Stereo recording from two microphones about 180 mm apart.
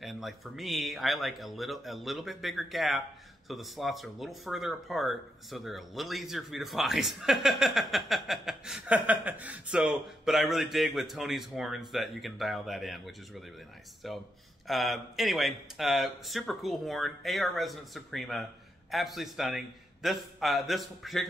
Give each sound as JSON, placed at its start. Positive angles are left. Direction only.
{"t": 0.0, "sound": "speech", "side_deg": 0}